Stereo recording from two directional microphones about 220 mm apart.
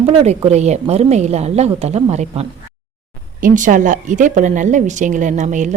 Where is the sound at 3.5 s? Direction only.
35° right (ahead or behind).